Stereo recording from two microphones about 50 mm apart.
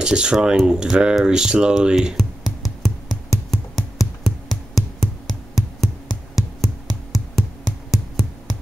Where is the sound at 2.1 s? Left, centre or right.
Centre.